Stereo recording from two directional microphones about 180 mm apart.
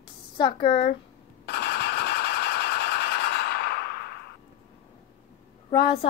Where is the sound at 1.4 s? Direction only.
65° left (ahead or behind).